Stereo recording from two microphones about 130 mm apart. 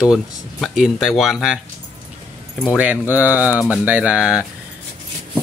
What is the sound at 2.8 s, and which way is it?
Mantra, 10° right (ahead or behind).